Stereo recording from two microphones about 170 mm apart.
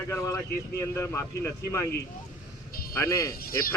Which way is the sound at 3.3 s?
60° left (ahead or behind).